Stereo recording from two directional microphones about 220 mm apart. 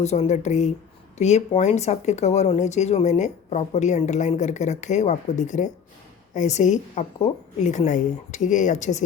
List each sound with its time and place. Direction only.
0.0 s speech: 30° left (ahead or behind)